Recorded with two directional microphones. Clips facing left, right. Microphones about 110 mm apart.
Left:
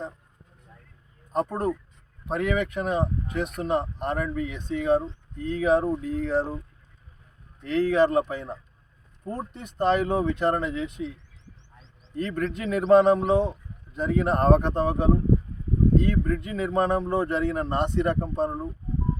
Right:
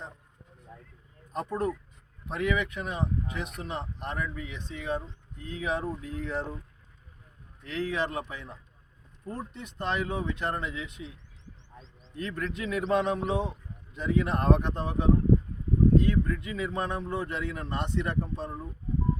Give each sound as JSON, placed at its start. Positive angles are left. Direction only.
{"t": 1.3, "sound": "speech", "side_deg": 45}
{"t": 7.6, "sound": "speech", "side_deg": 45}
{"t": 12.4, "sound": "speech", "side_deg": 45}